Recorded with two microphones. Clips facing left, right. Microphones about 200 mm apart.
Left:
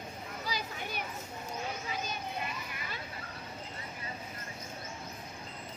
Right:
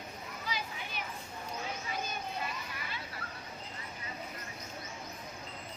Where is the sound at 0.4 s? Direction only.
40° left (ahead or behind).